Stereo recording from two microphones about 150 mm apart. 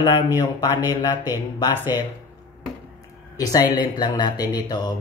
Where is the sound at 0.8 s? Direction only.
15° right (ahead or behind).